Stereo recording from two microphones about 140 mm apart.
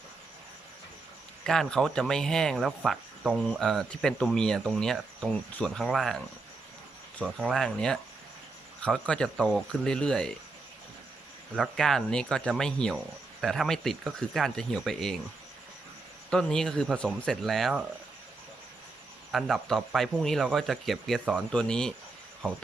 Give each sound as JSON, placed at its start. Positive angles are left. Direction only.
{"t": 1.5, "sound": "speech", "side_deg": 5}
{"t": 11.5, "sound": "speech", "side_deg": 5}
{"t": 16.3, "sound": "speech", "side_deg": 5}
{"t": 19.3, "sound": "speech", "side_deg": 0}